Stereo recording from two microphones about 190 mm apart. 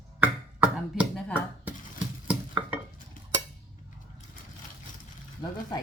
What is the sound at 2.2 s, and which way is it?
Dishes, 5° right (ahead or behind).